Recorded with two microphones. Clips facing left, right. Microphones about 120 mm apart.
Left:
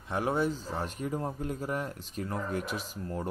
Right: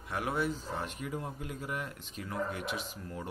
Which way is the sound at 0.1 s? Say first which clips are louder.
Left 4 dB; 30° left (ahead or behind).